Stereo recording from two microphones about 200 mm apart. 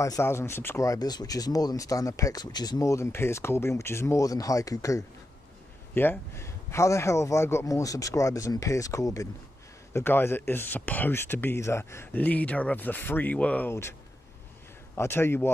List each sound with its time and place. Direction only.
0.0 s speech: 15° left (ahead or behind)
15.0 s speech: 10° left (ahead or behind)